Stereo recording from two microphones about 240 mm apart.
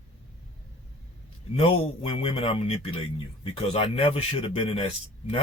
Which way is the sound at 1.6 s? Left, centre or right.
Left.